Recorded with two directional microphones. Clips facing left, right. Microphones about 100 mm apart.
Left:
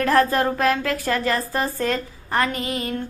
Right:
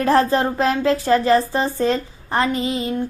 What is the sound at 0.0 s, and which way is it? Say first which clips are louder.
Speech: right 2 dB; 25° right (ahead or behind).